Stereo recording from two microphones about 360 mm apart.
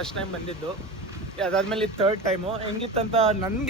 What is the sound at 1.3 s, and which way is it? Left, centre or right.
Speech, centre.